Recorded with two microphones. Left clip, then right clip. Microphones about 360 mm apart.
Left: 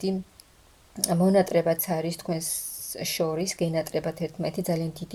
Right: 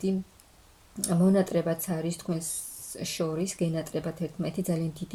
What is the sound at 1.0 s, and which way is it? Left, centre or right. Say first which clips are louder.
Speech: left 4 dB; centre.